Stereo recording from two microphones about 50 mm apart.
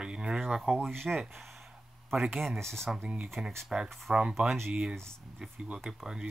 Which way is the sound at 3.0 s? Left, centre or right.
Right.